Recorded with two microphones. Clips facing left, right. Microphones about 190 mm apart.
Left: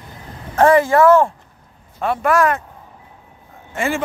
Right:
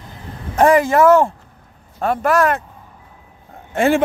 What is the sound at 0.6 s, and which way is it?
Speech, 15° right (ahead or behind).